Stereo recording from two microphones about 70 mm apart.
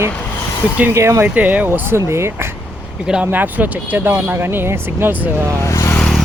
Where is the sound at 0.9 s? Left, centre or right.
Right.